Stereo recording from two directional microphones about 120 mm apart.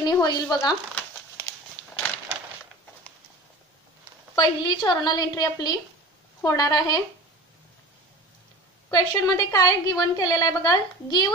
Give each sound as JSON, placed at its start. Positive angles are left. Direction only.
{"t": 0.0, "sound": "speech", "side_deg": 35}
{"t": 0.9, "sound": "crumpling", "side_deg": 20}
{"t": 4.4, "sound": "a woman's voice", "side_deg": 35}
{"t": 8.9, "sound": "a woman's voice", "side_deg": 30}